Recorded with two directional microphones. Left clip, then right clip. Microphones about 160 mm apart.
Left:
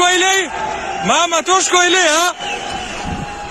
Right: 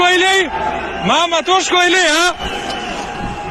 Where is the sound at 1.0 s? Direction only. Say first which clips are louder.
Even; 55° left (ahead or behind).